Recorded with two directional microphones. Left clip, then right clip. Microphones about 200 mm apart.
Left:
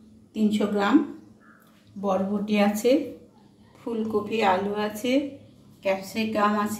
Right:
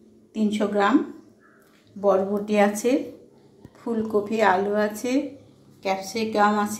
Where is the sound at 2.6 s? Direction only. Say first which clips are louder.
Even; 10° right (ahead or behind).